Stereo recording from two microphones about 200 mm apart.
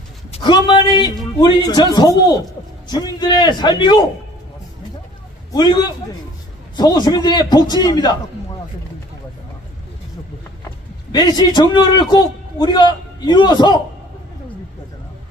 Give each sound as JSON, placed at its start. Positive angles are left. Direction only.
{"t": 0.3, "sound": "a man's voice", "side_deg": 20}
{"t": 5.5, "sound": "a man's voice", "side_deg": 20}
{"t": 11.1, "sound": "a man's voice", "side_deg": 20}